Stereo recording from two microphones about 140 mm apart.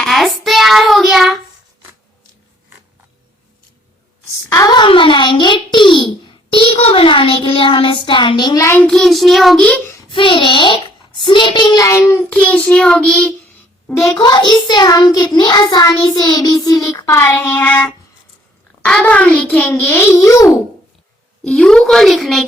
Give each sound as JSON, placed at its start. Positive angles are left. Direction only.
{"t": 0.0, "sound": "child singing", "side_deg": 0}
{"t": 4.4, "sound": "a sound", "side_deg": 25}
{"t": 6.7, "sound": "child singing", "side_deg": 45}
{"t": 8.6, "sound": "child singing", "side_deg": 15}
{"t": 8.9, "sound": "a woman's voice", "side_deg": 0}
{"t": 9.6, "sound": "child singing", "side_deg": 10}
{"t": 10.1, "sound": "child singing", "side_deg": 35}
{"t": 12.3, "sound": "a child's voice", "side_deg": 10}
{"t": 14.2, "sound": "child singing", "side_deg": 30}
{"t": 18.9, "sound": "a child's voice", "side_deg": 5}
{"t": 21.4, "sound": "a woman's voice", "side_deg": 5}